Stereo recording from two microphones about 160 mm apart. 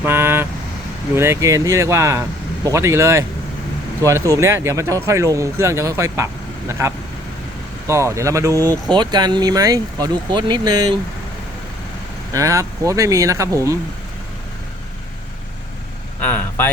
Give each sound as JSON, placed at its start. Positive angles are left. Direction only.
{"t": 0.0, "sound": "vehicle", "side_deg": -15}
{"t": 1.1, "sound": "speech", "side_deg": -15}
{"t": 12.3, "sound": "speech", "side_deg": -20}
{"t": 16.2, "sound": "speech", "side_deg": 10}